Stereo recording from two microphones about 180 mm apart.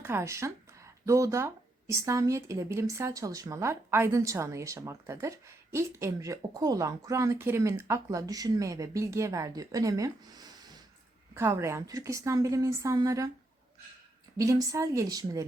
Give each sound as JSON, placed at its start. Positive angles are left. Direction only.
{"t": 0.0, "sound": "speech", "side_deg": -15}
{"t": 14.3, "sound": "speech", "side_deg": -20}